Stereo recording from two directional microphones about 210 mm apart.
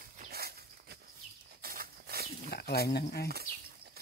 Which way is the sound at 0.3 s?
50° right (ahead or behind).